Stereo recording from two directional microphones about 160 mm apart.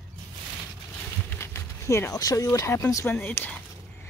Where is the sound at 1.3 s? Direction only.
15° left (ahead or behind).